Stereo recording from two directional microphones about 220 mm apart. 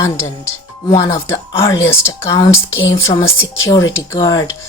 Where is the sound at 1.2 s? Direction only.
10° left (ahead or behind).